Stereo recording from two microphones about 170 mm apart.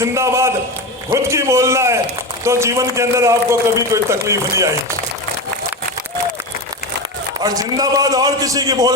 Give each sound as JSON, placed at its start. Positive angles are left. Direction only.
{"t": 0.0, "sound": "a man's voice", "side_deg": -15}
{"t": 7.3, "sound": "a man's voice", "side_deg": -20}